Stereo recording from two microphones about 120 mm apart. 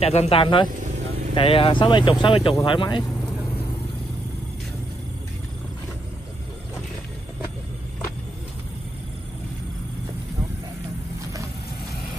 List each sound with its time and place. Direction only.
0.0 s speech: 60° left (ahead or behind)